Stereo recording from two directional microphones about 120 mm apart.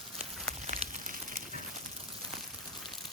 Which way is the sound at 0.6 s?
90° right.